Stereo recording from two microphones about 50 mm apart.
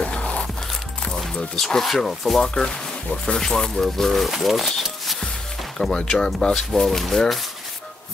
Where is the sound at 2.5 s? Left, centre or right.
Centre.